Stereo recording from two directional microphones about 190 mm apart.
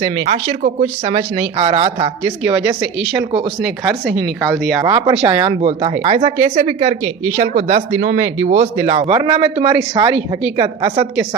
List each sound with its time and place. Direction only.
0.0 s speech: 30° right (ahead or behind)
2.4 s speech: 5° right (ahead or behind)
4.8 s speech: 20° right (ahead or behind)